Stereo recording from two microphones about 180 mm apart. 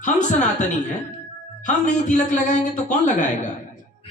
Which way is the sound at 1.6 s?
45° left (ahead or behind).